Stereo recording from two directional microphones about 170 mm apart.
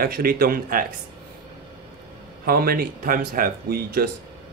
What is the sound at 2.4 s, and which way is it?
Speech, 60° right (ahead or behind).